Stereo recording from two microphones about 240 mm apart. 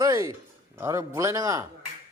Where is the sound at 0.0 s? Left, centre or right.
Centre.